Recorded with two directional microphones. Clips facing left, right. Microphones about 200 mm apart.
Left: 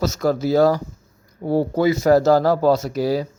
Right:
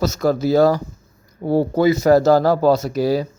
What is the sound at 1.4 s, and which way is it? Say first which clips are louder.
Speech: right 2 dB; 55° right (ahead or behind).